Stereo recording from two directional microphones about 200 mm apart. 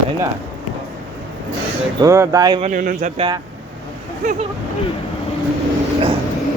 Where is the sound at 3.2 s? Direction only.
25° right (ahead or behind).